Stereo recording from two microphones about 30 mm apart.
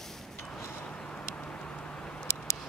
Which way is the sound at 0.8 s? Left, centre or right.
Left.